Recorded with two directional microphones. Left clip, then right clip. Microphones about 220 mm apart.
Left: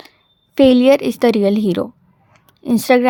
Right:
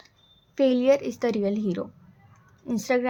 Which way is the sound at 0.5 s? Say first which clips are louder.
Left 10 dB; 45° left (ahead or behind).